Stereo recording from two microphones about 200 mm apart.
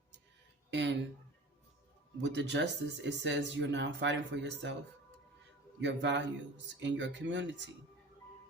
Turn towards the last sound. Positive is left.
turn(degrees=-65)  # may be behind; listen again after turning